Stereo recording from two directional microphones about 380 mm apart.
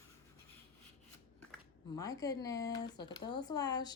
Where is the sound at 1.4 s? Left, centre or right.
Centre.